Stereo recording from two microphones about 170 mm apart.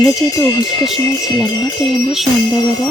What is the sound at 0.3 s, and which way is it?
Speech, 25° left (ahead or behind).